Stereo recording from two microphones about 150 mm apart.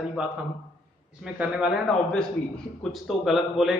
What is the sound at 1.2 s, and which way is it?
Speech, 5° right (ahead or behind).